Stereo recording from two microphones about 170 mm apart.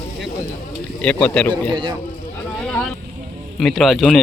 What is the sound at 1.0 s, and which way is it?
Speech, 5° left (ahead or behind).